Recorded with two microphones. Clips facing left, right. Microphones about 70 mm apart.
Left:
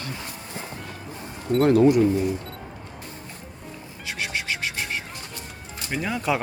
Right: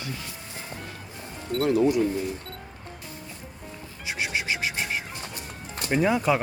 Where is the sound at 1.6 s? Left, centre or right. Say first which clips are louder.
Left 5 dB; left.